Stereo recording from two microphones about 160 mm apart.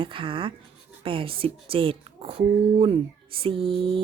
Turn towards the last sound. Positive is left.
turn(degrees=-35)  # may be behind; listen again after turning